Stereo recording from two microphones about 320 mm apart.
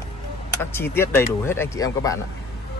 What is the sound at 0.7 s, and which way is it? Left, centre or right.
Speech, centre.